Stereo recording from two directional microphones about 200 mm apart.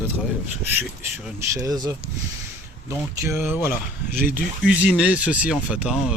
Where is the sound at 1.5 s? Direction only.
15° right (ahead or behind).